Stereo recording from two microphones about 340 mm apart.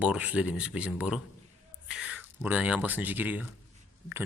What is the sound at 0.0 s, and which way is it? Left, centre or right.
Speech, centre.